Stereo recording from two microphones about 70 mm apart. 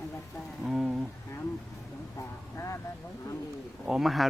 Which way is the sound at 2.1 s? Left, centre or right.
Left.